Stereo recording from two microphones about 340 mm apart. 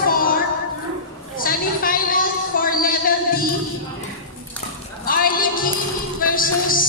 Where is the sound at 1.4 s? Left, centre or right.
Left.